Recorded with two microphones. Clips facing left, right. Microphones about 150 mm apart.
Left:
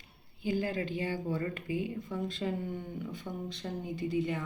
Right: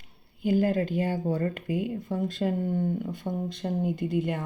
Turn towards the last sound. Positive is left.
turn(degrees=-55)  # may be behind; listen again after turning